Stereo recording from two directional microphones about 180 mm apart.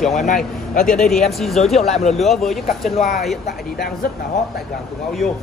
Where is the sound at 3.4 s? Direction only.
55° left (ahead or behind).